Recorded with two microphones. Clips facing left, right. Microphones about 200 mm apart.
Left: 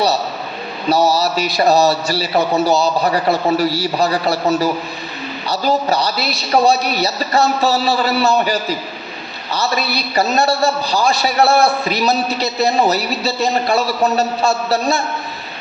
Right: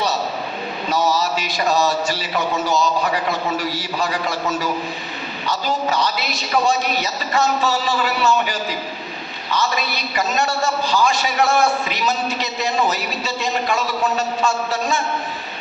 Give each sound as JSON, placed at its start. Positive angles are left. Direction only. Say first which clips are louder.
{"t": 0.9, "sound": "a man's voice", "louder": "left 5 dB", "side_deg": 35}